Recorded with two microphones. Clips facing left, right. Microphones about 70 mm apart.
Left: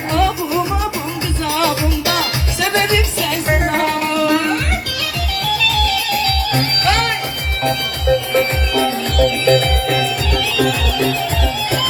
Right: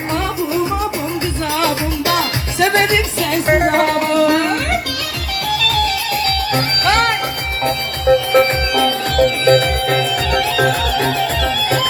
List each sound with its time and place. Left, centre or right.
1.5 s music: right
8.3 s music: right
10.3 s music: right